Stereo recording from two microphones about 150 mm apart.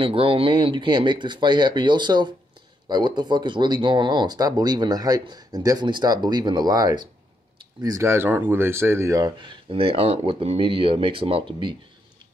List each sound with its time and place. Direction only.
0.0 s speech: 40° right (ahead or behind)